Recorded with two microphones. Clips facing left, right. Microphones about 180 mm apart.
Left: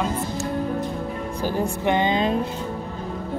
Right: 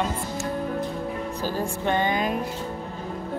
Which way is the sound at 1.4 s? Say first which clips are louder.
Left 5 dB; 15° left (ahead or behind).